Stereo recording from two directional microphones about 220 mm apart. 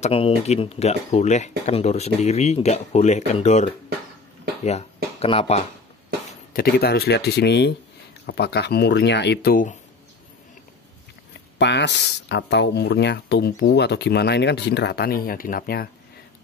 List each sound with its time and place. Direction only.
0.0 s speech: 25° left (ahead or behind)
6.5 s speech: 45° left (ahead or behind)
11.5 s speech: 50° left (ahead or behind)